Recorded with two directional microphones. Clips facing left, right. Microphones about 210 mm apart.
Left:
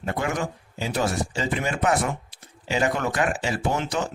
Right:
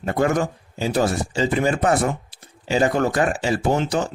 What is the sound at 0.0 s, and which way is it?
Speech, 40° right (ahead or behind).